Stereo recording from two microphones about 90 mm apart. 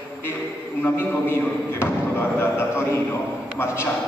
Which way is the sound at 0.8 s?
25° left (ahead or behind).